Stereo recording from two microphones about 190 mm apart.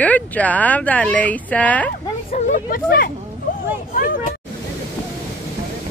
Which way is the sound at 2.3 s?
40° left (ahead or behind).